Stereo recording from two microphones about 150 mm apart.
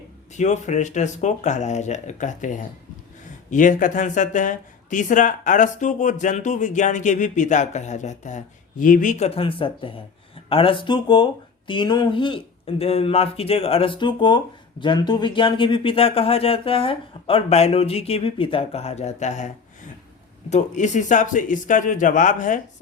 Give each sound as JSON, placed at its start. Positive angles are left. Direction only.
{"t": 0.3, "sound": "speech", "side_deg": 50}
{"t": 20.5, "sound": "speech", "side_deg": 50}